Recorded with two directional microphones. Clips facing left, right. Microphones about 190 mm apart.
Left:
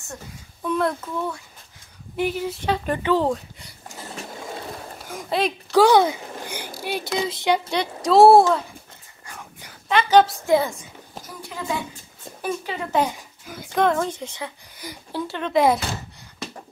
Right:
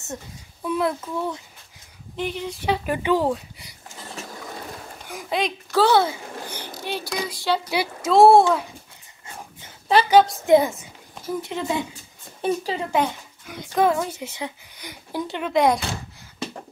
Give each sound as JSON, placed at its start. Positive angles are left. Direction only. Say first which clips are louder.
{"t": 0.7, "sound": "a child's voice", "louder": "left 1 dB", "side_deg": -5}
{"t": 2.1, "sound": "a woman's voice", "louder": "left 4 dB", "side_deg": 5}
{"t": 2.6, "sound": "a child's voice", "louder": "right 2 dB", "side_deg": -10}
{"t": 5.0, "sound": "speech", "louder": "left 2 dB", "side_deg": 0}
{"t": 5.7, "sound": "a sound", "louder": "left 3 dB", "side_deg": 15}
{"t": 7.1, "sound": "speech", "louder": "left 3 dB", "side_deg": 20}
{"t": 7.7, "sound": "a woman's voice", "louder": "even", "side_deg": -5}
{"t": 9.9, "sound": "a woman's voice", "louder": "right 3 dB", "side_deg": -35}
{"t": 10.4, "sound": "a woman's voice", "louder": "right 3 dB", "side_deg": -20}
{"t": 12.9, "sound": "speech", "louder": "left 2 dB", "side_deg": 5}
{"t": 14.8, "sound": "speech", "louder": "left 3 dB", "side_deg": 5}
{"t": 15.1, "sound": "a child's voice", "louder": "even", "side_deg": -15}
{"t": 15.5, "sound": "a woman's voice", "louder": "left 1 dB", "side_deg": 0}